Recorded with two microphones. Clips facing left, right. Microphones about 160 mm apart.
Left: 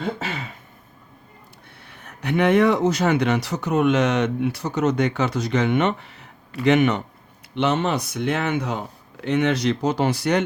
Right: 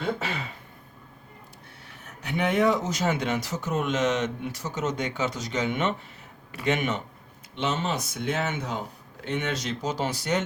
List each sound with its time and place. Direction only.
2.0 s speech: 65° left (ahead or behind)